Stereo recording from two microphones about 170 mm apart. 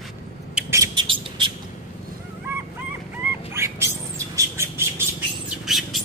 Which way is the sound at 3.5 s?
15° right (ahead or behind).